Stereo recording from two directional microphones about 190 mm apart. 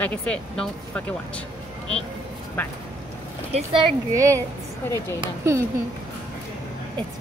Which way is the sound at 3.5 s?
30° right (ahead or behind).